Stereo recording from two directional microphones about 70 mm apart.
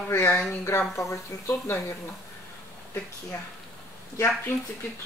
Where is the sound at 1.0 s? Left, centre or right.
Left.